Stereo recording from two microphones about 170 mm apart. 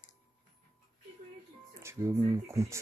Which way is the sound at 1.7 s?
15° right (ahead or behind).